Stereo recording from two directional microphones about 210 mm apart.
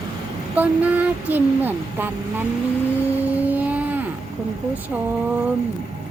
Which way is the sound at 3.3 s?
10° right (ahead or behind).